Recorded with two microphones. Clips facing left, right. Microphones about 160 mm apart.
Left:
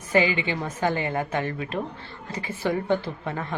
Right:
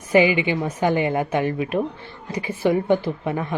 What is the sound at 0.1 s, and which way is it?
Speech, 15° right (ahead or behind).